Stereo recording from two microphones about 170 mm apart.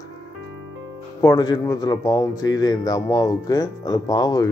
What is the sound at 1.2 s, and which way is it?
Speech, 25° left (ahead or behind).